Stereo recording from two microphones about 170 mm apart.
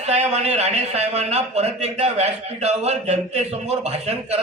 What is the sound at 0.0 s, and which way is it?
A man's voice, 40° right (ahead or behind).